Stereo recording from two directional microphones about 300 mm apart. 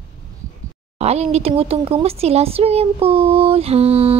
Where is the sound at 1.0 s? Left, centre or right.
Right.